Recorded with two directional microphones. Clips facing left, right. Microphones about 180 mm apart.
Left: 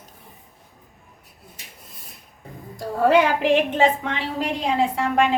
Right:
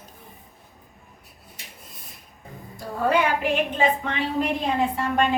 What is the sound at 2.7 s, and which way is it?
A woman's voice, 90° left.